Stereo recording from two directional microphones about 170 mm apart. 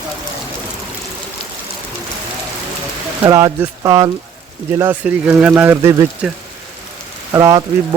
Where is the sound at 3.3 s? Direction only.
20° right (ahead or behind).